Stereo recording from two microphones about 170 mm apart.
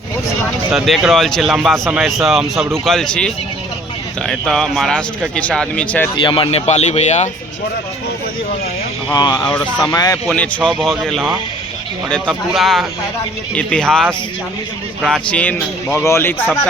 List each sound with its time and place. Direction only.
0.7 s speech: centre (ahead or behind)
6.1 s speech: 30° left (ahead or behind)
9.1 s speech: 25° left (ahead or behind)
9.5 s speech: 10° left (ahead or behind)